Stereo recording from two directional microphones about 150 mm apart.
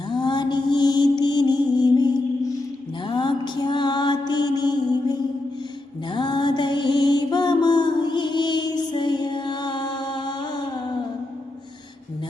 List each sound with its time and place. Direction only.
0.1 s mantra: 30° left (ahead or behind)
3.1 s mantra: 30° left (ahead or behind)
6.1 s mantra: 30° left (ahead or behind)